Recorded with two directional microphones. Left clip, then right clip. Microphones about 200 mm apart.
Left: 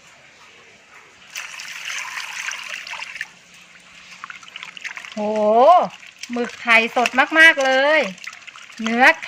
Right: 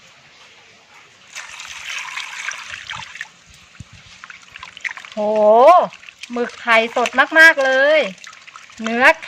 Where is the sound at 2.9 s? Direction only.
15° right (ahead or behind).